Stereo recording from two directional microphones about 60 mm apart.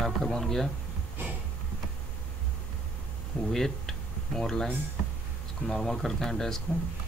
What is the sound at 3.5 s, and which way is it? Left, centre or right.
Speech, centre.